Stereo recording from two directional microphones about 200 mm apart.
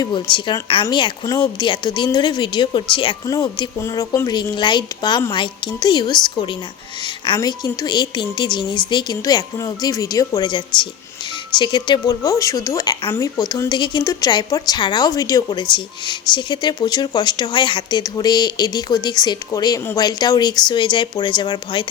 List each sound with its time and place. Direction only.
0.0 s a woman's voice: 25° left (ahead or behind)